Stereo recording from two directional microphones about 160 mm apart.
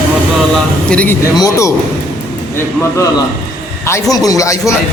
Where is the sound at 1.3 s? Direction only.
20° left (ahead or behind).